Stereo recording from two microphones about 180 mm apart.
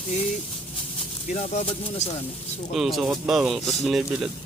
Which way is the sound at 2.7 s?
Centre (ahead or behind).